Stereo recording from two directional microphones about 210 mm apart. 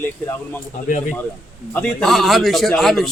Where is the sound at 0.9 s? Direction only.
35° left (ahead or behind).